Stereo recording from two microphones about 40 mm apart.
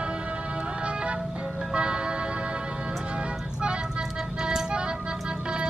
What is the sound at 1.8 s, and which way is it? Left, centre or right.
Music, right.